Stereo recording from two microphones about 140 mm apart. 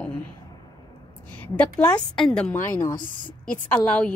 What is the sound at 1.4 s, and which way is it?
A woman's voice, 10° left (ahead or behind).